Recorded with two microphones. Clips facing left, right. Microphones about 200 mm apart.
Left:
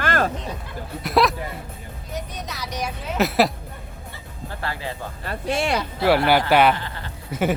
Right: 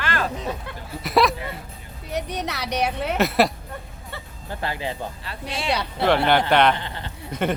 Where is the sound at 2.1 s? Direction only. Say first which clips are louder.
Right 5 dB; 70° right (ahead or behind).